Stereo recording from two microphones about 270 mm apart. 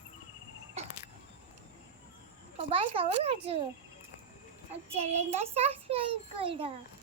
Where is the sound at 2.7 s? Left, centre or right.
Centre.